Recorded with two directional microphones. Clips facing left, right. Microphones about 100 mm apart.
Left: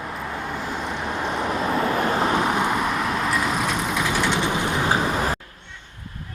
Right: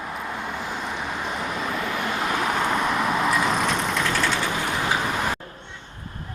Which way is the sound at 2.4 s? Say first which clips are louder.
Left 1 dB; 10° left (ahead or behind).